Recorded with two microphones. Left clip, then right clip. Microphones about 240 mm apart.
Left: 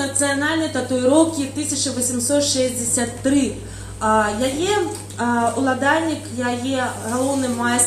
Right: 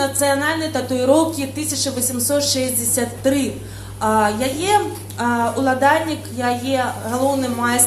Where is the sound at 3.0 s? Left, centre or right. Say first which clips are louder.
Right 1 dB; right.